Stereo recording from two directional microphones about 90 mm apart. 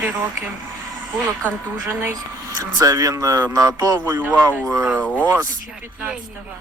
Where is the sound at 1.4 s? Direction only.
20° right (ahead or behind).